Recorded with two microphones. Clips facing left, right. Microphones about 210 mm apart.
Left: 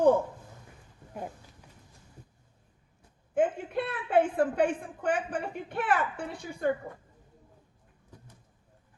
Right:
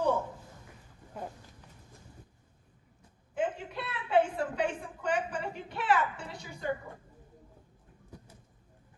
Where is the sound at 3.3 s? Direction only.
50° left (ahead or behind).